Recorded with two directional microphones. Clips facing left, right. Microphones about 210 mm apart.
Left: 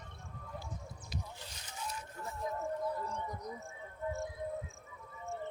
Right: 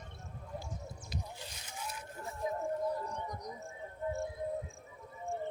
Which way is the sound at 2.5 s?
25° right (ahead or behind).